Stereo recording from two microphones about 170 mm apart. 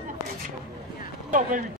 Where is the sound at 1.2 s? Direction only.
50° right (ahead or behind).